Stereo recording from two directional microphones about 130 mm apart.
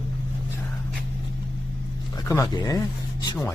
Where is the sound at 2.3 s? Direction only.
25° left (ahead or behind).